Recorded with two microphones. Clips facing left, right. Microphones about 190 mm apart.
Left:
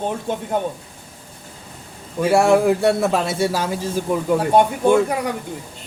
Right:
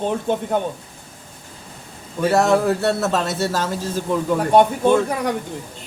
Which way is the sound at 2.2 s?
10° left (ahead or behind).